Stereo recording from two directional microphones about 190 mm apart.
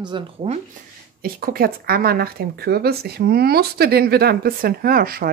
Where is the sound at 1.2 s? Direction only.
50° right (ahead or behind).